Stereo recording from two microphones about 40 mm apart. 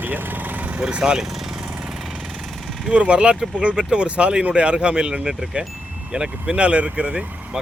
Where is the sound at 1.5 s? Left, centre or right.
Right.